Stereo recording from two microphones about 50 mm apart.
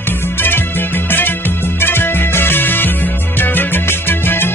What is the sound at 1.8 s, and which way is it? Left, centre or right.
Music, left.